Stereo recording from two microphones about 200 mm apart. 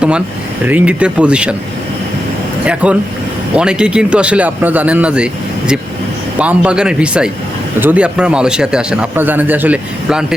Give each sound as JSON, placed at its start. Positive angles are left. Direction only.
{"t": 0.7, "sound": "a man's voice", "side_deg": -5}
{"t": 2.6, "sound": "a man's voice", "side_deg": -5}